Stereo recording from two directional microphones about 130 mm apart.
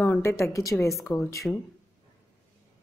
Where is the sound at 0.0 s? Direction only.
20° left (ahead or behind).